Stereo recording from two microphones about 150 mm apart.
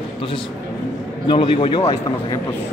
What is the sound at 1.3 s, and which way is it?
A man's voice, 35° left (ahead or behind).